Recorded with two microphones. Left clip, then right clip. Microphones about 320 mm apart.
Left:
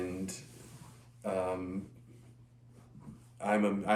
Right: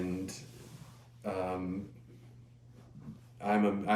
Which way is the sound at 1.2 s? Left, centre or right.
Centre.